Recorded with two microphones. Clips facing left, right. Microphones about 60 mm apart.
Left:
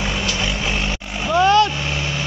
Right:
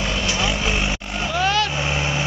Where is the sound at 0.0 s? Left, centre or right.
Centre.